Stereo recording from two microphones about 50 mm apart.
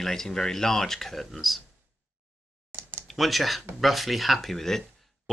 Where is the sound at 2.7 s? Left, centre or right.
Right.